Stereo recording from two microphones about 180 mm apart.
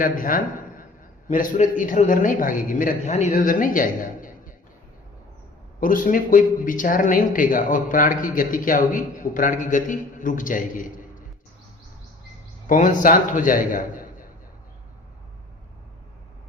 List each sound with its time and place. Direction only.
0.0 s a man's voice: 50° left (ahead or behind)
5.8 s a man's voice: 50° left (ahead or behind)
12.6 s a man's voice: 45° left (ahead or behind)